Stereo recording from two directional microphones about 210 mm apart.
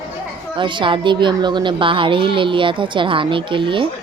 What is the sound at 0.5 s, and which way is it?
A child's voice, 20° right (ahead or behind).